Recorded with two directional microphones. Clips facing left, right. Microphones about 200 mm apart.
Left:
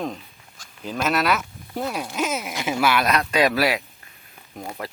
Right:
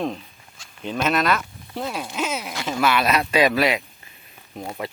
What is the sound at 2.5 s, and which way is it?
Speech, 15° left (ahead or behind).